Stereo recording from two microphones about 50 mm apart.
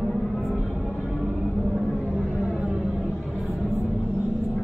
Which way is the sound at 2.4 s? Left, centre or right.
Centre.